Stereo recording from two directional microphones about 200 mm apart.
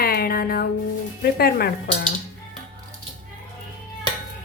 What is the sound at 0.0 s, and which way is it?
Music, 50° left (ahead or behind).